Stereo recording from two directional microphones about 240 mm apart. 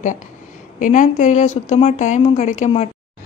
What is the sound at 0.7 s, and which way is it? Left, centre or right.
Speech, left.